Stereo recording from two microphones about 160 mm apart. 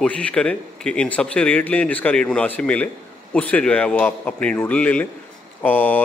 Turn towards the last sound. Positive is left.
turn(degrees=10)  # may be behind; listen again after turning